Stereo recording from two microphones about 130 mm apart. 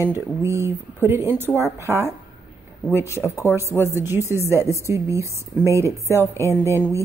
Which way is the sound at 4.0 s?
20° right (ahead or behind).